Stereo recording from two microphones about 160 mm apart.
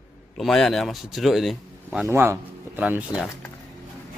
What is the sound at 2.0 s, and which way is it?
Speech, 15° right (ahead or behind).